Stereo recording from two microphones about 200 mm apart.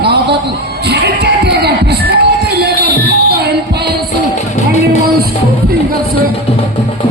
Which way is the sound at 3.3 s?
55° right (ahead or behind).